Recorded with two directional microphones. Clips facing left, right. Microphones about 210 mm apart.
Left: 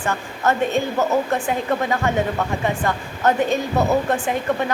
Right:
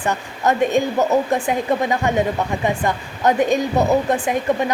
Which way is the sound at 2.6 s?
15° right (ahead or behind).